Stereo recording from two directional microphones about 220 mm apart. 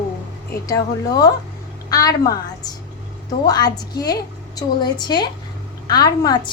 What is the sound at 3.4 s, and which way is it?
A woman's voice, 15° left (ahead or behind).